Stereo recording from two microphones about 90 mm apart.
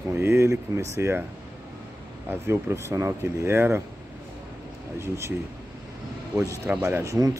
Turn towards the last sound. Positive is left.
turn(degrees=-25)  # may be behind; listen again after turning